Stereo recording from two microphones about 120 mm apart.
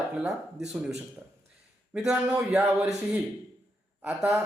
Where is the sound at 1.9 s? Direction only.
5° right (ahead or behind).